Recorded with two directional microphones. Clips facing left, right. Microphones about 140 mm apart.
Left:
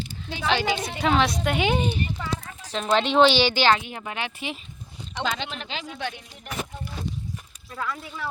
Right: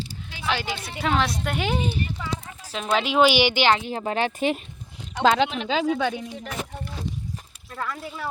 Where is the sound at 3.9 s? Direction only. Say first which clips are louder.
Right 7 dB; 35° right (ahead or behind).